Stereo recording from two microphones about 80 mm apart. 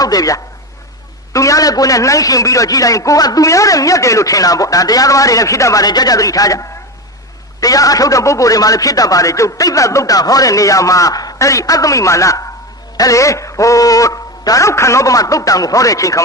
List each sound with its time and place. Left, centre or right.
0.0 s a man's voice: left